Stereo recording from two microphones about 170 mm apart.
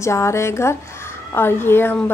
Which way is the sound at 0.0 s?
15° left (ahead or behind).